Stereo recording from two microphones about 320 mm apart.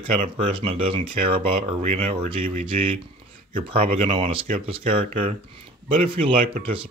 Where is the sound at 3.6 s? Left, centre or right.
Centre.